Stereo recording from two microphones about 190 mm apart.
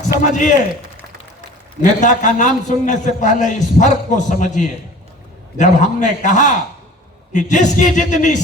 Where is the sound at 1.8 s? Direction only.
40° left (ahead or behind).